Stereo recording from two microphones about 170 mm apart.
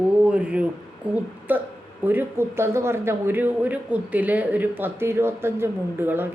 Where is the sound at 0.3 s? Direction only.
5° right (ahead or behind).